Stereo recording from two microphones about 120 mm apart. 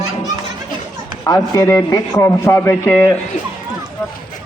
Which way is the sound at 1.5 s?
20° left (ahead or behind).